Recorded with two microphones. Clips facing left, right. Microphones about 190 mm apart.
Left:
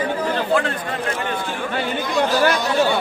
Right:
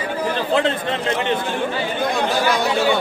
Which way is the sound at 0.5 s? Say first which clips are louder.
Right 2 dB; 25° right (ahead or behind).